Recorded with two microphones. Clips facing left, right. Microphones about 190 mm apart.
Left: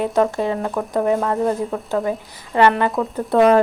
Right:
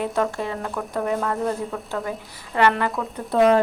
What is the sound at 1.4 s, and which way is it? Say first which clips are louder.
Speech: left 5 dB; 35° left (ahead or behind).